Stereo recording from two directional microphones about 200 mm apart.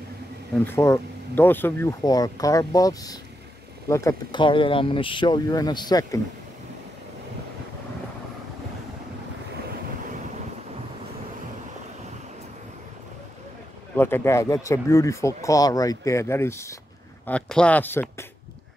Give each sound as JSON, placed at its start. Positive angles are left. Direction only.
{"t": 0.7, "sound": "speech", "side_deg": 15}
{"t": 13.9, "sound": "speech", "side_deg": 10}